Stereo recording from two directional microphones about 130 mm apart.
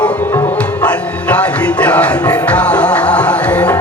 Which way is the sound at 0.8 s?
10° left (ahead or behind).